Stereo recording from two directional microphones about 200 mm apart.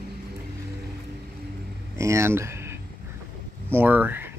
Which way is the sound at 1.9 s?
15° right (ahead or behind).